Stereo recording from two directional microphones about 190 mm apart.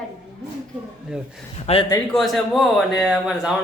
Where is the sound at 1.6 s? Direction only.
30° left (ahead or behind).